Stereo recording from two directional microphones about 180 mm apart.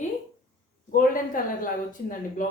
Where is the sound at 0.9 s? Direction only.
50° left (ahead or behind).